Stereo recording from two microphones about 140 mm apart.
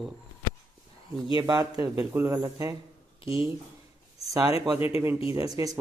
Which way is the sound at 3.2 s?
40° left (ahead or behind).